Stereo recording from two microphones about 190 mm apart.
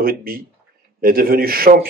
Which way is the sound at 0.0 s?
50° right (ahead or behind).